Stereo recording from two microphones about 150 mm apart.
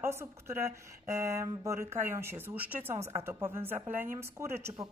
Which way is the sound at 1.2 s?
20° right (ahead or behind).